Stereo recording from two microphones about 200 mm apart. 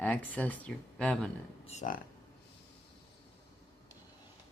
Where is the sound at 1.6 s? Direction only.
40° left (ahead or behind).